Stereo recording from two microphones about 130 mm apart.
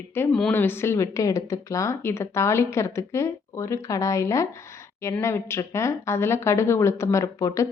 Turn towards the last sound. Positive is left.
turn(degrees=25)  # may be behind; listen again after turning